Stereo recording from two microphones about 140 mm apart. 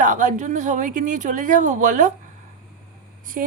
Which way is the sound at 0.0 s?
65° right (ahead or behind).